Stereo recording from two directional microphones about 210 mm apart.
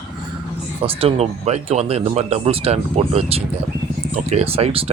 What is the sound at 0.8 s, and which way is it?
Speech, 30° right (ahead or behind).